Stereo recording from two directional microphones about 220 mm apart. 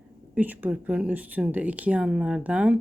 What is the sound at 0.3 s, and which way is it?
Speech, 10° right (ahead or behind).